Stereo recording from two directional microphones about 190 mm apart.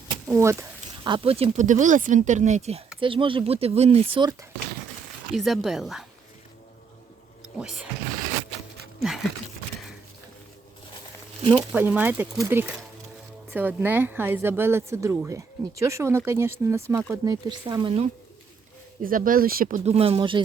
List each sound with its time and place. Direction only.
0.3 s speech: 15° right (ahead or behind)
1.0 s speech: 25° right (ahead or behind)
5.3 s speech: centre (ahead or behind)
7.6 s speech: 5° right (ahead or behind)
9.0 s a sound: centre (ahead or behind)
11.5 s speech: 10° right (ahead or behind); by 18.1 s 25° right (ahead or behind)
19.0 s speech: 45° right (ahead or behind); by 20.4 s 25° right (ahead or behind)